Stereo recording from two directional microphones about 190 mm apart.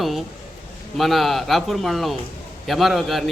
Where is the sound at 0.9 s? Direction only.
Centre (ahead or behind).